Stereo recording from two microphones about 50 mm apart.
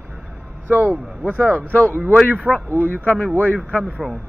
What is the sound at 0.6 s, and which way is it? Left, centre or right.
Speech, right.